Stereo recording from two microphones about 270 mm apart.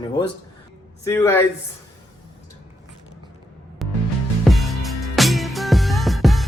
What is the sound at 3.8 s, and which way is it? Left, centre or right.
Music, centre.